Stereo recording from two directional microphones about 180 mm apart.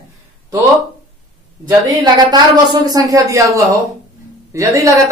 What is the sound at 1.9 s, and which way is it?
A man's voice, 25° right (ahead or behind).